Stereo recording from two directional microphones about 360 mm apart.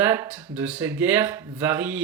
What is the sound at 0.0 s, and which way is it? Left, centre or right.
Speech, centre.